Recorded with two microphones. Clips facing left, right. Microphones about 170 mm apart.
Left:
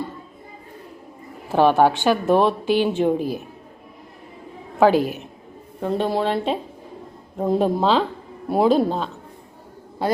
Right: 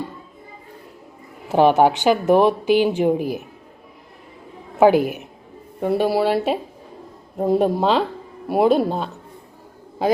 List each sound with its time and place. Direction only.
1.5 s speech: 15° right (ahead or behind)
4.8 s speech: 15° right (ahead or behind)